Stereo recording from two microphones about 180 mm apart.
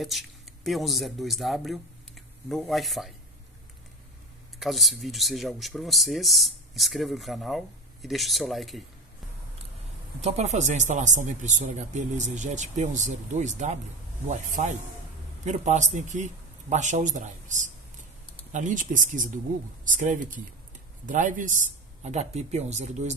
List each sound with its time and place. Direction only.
0.0 s speech: centre (ahead or behind)
4.6 s speech: centre (ahead or behind)
10.2 s a man's voice: 40° right (ahead or behind)